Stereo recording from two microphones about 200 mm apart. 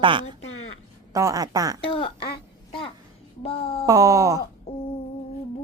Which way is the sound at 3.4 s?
30° left (ahead or behind).